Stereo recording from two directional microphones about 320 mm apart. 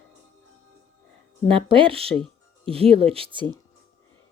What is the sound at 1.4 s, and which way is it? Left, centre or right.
Speech, centre.